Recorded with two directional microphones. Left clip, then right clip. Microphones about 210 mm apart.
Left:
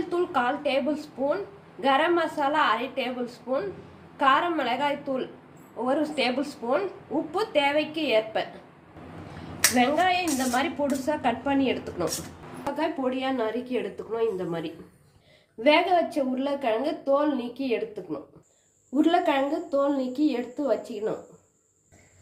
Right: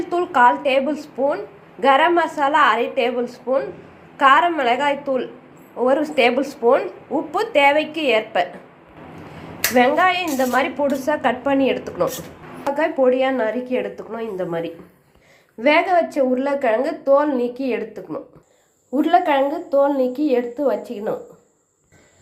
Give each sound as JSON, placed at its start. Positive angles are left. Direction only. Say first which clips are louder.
{"t": 0.1, "sound": "a sound", "louder": "right 9 dB", "side_deg": -15}
{"t": 0.6, "sound": "a woman's voice", "louder": "right 7 dB", "side_deg": -15}
{"t": 9.7, "sound": "a woman's voice", "louder": "right 8 dB", "side_deg": -10}
{"t": 15.6, "sound": "a woman's voice", "louder": "right 5 dB", "side_deg": -15}